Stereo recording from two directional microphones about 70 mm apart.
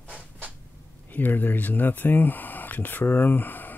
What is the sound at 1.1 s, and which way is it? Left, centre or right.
Speech, left.